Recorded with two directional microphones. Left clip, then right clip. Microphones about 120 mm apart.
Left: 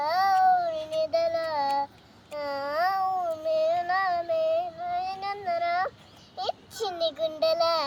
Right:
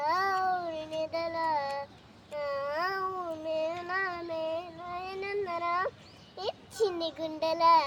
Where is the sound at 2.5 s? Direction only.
20° right (ahead or behind).